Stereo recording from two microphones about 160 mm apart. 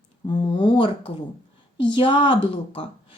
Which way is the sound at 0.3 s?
30° left (ahead or behind).